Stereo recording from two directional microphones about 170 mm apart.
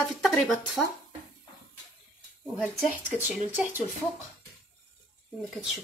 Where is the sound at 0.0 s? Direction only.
Centre (ahead or behind).